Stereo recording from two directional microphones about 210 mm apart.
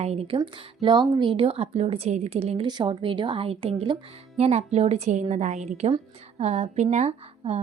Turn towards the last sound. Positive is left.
turn(degrees=-30)  # may be behind; listen again after turning